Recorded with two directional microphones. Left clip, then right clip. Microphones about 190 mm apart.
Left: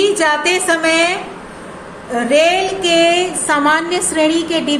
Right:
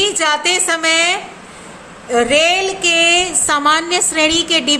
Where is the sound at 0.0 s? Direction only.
35° right (ahead or behind).